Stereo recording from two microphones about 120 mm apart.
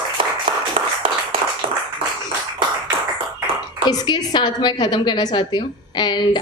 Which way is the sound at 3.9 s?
35° left (ahead or behind).